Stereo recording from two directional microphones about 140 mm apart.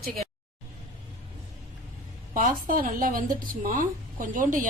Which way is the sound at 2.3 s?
80° right.